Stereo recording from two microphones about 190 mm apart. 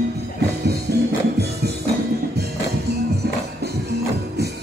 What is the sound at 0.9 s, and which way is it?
Music, 55° right (ahead or behind).